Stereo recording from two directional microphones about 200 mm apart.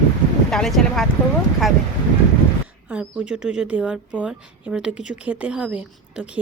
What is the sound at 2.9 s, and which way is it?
Speech, 5° right (ahead or behind).